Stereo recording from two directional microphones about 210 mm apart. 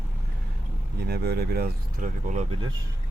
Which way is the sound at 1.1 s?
50° right (ahead or behind).